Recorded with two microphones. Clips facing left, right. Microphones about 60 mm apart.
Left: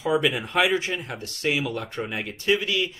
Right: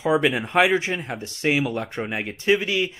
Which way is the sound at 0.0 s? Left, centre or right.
Right.